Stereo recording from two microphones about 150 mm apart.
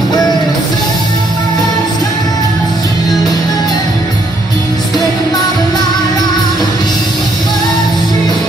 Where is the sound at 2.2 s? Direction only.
25° left (ahead or behind).